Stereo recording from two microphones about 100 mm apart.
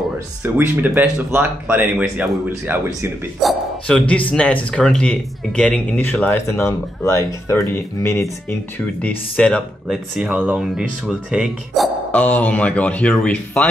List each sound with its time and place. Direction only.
0.4 s speech: 20° right (ahead or behind)
3.4 s speech: centre (ahead or behind); by 8.5 s 25° left (ahead or behind)
9.0 s speech: 15° left (ahead or behind)
9.8 s speech: 5° right (ahead or behind)
12.1 s speech: 15° left (ahead or behind)